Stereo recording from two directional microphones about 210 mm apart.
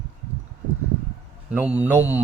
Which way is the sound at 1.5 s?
5° right (ahead or behind).